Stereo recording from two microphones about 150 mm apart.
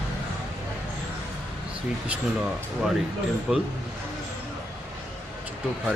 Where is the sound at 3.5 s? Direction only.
5° right (ahead or behind).